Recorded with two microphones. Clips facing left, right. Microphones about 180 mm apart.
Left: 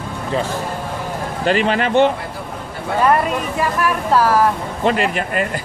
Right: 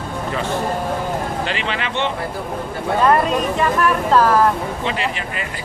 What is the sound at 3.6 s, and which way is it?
Speech, 10° left (ahead or behind).